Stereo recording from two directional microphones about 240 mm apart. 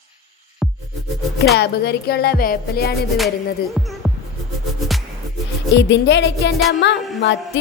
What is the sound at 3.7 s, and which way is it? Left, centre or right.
Music, centre.